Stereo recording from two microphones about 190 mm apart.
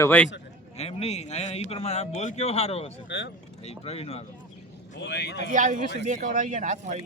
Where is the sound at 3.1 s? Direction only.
70° left (ahead or behind).